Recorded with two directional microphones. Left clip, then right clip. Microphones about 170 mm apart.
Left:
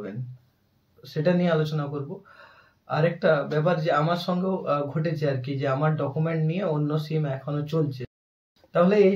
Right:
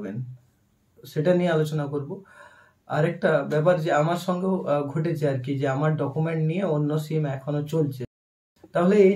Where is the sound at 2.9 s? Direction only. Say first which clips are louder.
Even; 10° right (ahead or behind).